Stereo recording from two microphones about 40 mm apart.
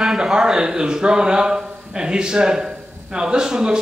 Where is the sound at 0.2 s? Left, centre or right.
Centre.